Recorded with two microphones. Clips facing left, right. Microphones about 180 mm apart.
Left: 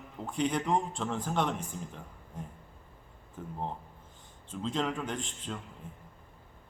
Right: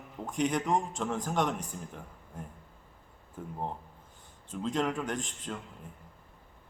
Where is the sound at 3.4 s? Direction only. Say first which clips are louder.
Right 1 dB; 5° right (ahead or behind).